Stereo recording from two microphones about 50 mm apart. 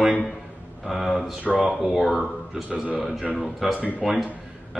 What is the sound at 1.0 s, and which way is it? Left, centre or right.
A man's voice, centre.